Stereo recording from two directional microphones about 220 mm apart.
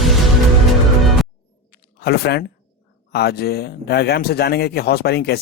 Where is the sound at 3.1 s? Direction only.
45° left (ahead or behind).